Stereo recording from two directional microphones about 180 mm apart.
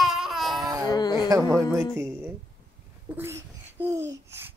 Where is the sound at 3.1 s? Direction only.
15° right (ahead or behind).